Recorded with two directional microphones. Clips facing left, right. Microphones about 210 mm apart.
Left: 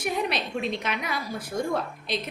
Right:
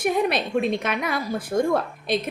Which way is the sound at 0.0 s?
50° right (ahead or behind).